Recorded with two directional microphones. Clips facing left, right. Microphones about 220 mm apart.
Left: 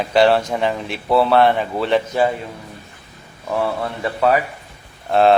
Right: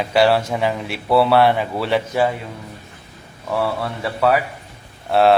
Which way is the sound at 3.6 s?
15° left (ahead or behind).